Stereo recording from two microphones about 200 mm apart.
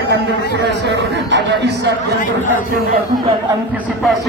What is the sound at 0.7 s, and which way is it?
Speech, 60° right (ahead or behind).